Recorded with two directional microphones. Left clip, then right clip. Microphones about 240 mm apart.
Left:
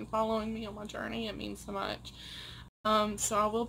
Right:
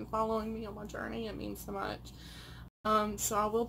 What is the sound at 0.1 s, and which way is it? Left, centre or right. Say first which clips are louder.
Speech: left 2 dB; centre.